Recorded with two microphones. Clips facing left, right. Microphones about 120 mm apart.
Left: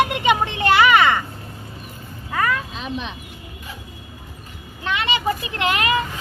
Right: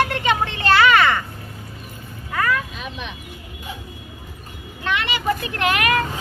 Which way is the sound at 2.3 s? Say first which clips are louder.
Even; 20° left (ahead or behind).